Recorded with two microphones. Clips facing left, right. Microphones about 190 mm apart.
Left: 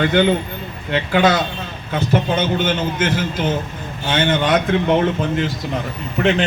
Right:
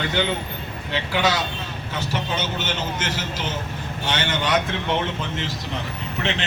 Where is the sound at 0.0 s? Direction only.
55° left (ahead or behind).